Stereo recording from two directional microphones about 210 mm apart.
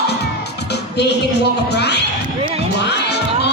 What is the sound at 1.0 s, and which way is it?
Speech, 55° left (ahead or behind).